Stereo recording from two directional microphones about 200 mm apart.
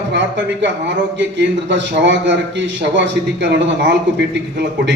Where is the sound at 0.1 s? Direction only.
65° right (ahead or behind).